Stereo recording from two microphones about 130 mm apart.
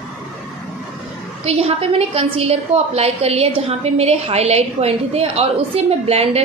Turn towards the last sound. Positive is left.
turn(degrees=-50)  # may be behind; listen again after turning